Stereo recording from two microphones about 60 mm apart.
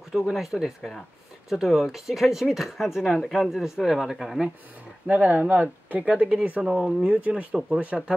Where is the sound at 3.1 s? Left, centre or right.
Centre.